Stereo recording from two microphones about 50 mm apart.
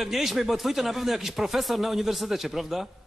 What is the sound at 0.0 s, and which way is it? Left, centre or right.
Speech, centre.